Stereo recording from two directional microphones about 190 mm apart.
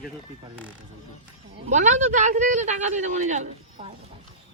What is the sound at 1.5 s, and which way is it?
Speech, 40° right (ahead or behind).